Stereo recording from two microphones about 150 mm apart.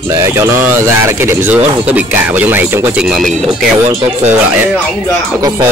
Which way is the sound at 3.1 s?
Centre (ahead or behind).